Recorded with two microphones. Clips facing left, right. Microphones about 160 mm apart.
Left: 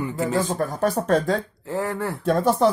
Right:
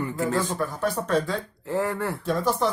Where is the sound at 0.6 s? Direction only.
45° left (ahead or behind).